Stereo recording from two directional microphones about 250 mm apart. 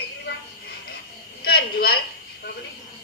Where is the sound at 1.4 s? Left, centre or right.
Left.